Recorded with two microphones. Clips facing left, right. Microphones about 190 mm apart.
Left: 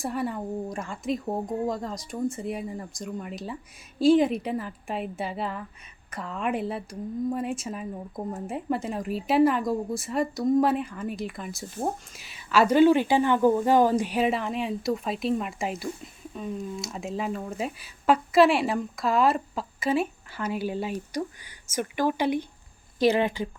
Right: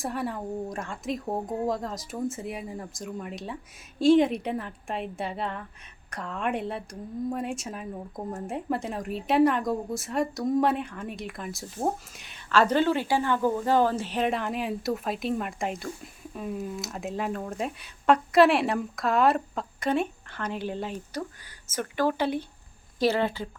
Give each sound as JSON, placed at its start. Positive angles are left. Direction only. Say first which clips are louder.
{"t": 0.0, "sound": "speech", "louder": "left 2 dB", "side_deg": 0}